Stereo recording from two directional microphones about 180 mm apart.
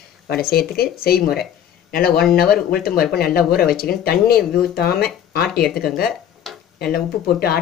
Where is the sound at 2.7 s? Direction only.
55° left (ahead or behind).